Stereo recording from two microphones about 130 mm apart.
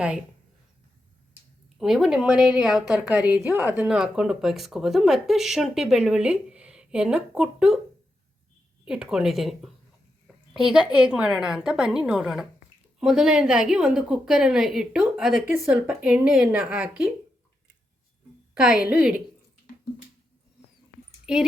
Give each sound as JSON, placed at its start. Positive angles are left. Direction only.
{"t": 1.8, "sound": "a woman's voice", "side_deg": -5}
{"t": 8.8, "sound": "a woman's voice", "side_deg": -5}
{"t": 15.4, "sound": "speech", "side_deg": -15}
{"t": 18.5, "sound": "a woman's voice", "side_deg": -5}
{"t": 21.3, "sound": "a woman's voice", "side_deg": -5}